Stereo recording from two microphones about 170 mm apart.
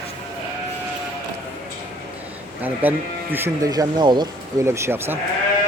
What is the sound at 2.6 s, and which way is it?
Speech, 10° right (ahead or behind).